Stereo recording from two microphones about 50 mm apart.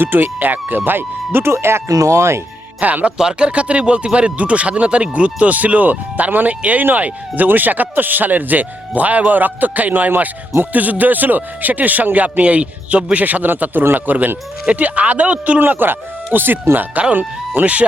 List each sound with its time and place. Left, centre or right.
0.0 s speech: right
2.8 s speech: right
3.2 s speech: centre
15.6 s speech: right